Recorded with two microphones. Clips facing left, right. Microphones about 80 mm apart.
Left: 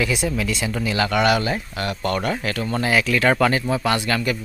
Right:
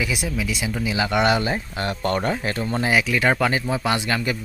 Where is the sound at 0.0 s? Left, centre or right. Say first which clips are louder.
Left 3 dB; centre.